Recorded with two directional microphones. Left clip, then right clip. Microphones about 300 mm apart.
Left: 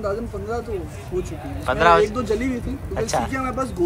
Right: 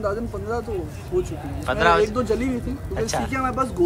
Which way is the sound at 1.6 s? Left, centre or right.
Centre.